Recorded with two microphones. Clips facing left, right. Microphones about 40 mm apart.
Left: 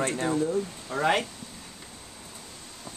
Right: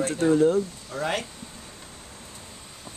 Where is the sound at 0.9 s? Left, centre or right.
Centre.